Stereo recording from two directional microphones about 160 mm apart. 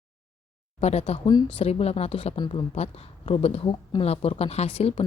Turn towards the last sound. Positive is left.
turn(degrees=40)  # may be behind; listen again after turning